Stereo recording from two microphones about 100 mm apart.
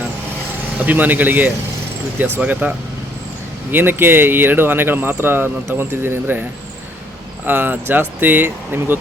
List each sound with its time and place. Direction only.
0.8 s speech: 15° right (ahead or behind)
7.4 s speech: 20° right (ahead or behind)